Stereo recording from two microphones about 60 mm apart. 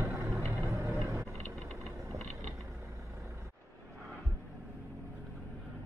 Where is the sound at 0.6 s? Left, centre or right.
Right.